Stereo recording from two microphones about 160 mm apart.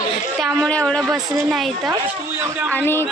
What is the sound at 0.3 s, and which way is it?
A woman's voice, 5° left (ahead or behind).